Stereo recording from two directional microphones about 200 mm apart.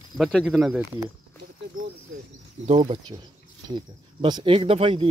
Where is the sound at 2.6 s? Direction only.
30° right (ahead or behind).